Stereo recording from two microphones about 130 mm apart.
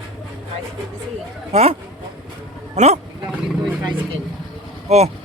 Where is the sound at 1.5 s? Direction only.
50° right (ahead or behind).